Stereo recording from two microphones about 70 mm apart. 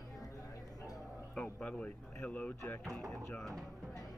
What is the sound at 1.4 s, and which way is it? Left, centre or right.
Speech, centre.